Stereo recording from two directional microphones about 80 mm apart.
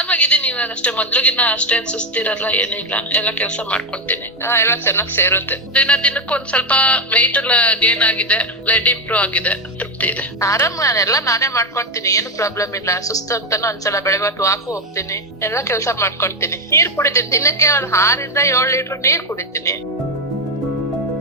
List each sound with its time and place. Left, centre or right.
0.0 s a woman's voice: centre
4.4 s a woman's voice: left
5.7 s a woman's voice: centre
10.4 s a woman's voice: left